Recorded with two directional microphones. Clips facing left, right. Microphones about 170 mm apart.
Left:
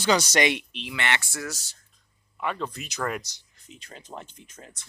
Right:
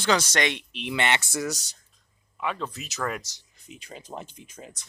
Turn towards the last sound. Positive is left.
turn(degrees=-10)  # may be behind; listen again after turning